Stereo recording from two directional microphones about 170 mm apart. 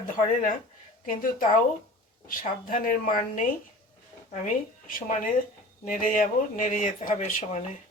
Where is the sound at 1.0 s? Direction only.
50° left (ahead or behind).